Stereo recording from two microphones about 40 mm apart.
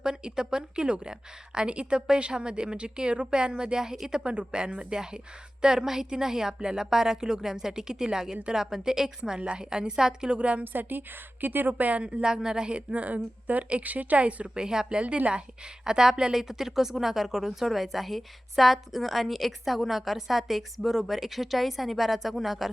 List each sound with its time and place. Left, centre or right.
0.0 s a woman's voice: centre
4.2 s a woman's voice: right
10.3 s a woman's voice: right
10.6 s a woman's voice: right
11.7 s a woman's voice: right
12.2 s a woman's voice: centre
12.9 s a woman's voice: right; by 15.0 s centre
15.0 s a woman's voice: right
15.3 s a woman's voice: right; by 22.7 s centre